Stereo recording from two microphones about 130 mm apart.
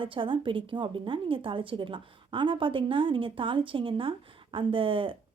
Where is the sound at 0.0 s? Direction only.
40° right (ahead or behind).